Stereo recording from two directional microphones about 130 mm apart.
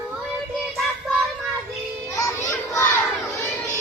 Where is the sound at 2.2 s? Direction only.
25° left (ahead or behind).